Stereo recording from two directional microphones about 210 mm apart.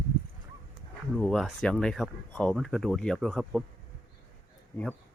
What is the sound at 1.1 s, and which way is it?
Speech, centre (ahead or behind).